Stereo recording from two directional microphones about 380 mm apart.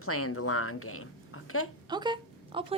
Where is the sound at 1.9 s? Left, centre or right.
Centre.